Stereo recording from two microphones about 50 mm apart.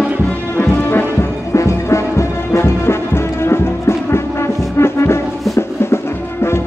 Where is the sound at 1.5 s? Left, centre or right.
Left.